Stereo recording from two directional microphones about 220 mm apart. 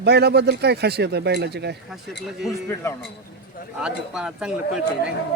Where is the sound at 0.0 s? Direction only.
50° right (ahead or behind).